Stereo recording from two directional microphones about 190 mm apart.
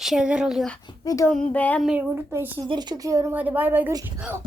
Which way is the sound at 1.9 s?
10° right (ahead or behind).